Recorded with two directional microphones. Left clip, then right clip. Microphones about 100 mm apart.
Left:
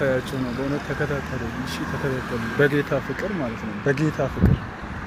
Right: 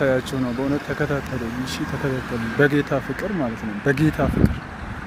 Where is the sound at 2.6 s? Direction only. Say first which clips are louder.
Right 2 dB; 65° right (ahead or behind).